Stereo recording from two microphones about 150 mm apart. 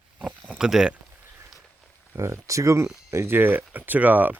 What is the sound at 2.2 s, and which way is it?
Speech, 20° right (ahead or behind).